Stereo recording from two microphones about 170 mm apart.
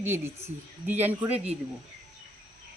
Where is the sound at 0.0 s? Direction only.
15° right (ahead or behind).